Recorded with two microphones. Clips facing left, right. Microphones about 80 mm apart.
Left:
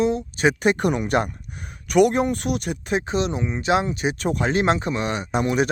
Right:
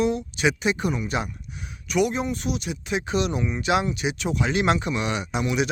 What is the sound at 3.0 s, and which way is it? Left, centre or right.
Speech, left.